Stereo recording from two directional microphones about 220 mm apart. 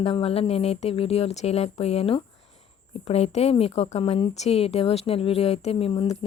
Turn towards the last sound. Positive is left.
turn(degrees=25)  # may be behind; listen again after turning